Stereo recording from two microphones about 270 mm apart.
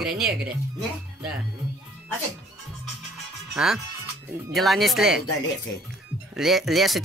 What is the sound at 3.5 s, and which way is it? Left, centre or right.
Speech, centre.